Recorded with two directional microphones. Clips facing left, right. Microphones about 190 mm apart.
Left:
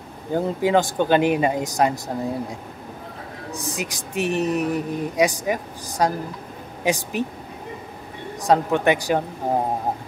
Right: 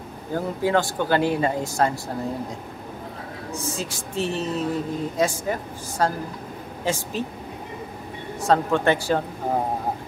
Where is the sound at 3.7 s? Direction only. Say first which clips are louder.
Left 4 dB; 15° left (ahead or behind).